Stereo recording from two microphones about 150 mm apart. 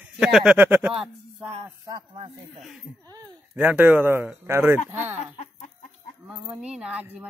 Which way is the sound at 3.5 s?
10° right (ahead or behind).